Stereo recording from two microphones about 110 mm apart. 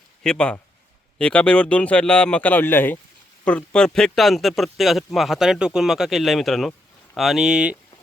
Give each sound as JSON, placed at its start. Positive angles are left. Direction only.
{"t": 0.2, "sound": "a man's voice", "side_deg": 10}